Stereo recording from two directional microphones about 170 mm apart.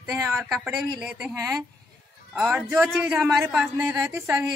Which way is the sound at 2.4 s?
10° right (ahead or behind).